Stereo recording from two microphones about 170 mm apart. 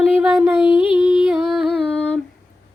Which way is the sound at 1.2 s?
Centre (ahead or behind).